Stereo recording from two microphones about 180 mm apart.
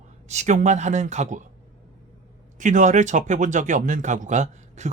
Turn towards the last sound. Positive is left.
turn(degrees=-40)  # may be behind; listen again after turning